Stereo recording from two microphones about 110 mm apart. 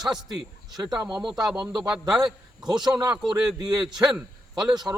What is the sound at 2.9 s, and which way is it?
Speech, 40° right (ahead or behind).